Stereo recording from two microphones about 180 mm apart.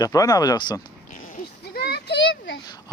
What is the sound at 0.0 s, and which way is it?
Speech, 20° left (ahead or behind).